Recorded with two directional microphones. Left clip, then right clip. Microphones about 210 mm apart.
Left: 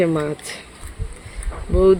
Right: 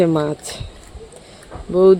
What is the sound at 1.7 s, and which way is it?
Speech, 10° right (ahead or behind).